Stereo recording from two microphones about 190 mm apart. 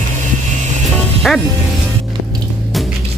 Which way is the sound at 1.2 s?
Centre (ahead or behind).